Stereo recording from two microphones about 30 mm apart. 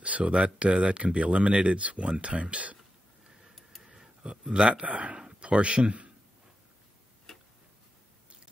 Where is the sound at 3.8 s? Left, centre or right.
Centre.